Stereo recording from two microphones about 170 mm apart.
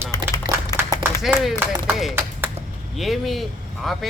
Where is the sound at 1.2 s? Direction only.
5° right (ahead or behind).